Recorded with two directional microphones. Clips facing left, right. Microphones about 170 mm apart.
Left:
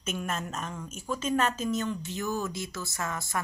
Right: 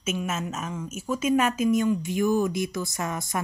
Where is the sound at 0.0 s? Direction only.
5° right (ahead or behind).